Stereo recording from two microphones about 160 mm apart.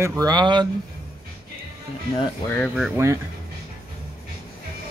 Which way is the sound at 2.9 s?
20° right (ahead or behind).